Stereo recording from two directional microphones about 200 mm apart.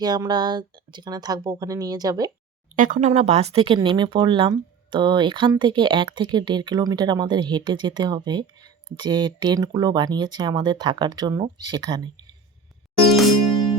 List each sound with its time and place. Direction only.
0.0 s speech: 20° right (ahead or behind)
2.7 s speech: 40° right (ahead or behind); by 12.2 s 20° right (ahead or behind)